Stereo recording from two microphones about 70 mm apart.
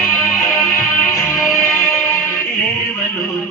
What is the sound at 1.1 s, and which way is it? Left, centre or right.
Music, left.